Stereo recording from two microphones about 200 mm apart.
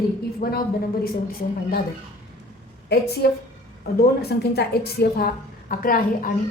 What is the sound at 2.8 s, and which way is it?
A woman's voice, 55° left (ahead or behind).